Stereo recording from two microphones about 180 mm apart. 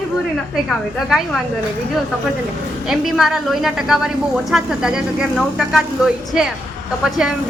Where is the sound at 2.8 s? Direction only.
Centre (ahead or behind).